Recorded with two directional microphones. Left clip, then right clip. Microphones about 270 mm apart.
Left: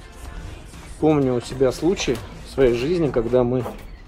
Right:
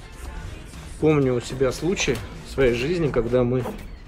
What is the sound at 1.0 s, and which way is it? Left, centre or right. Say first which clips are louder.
Speech: left 1 dB; centre.